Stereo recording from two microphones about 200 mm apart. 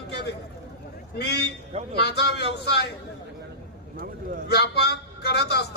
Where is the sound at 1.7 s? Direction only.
30° right (ahead or behind).